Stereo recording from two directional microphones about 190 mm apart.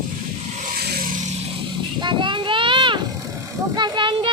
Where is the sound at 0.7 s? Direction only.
50° right (ahead or behind).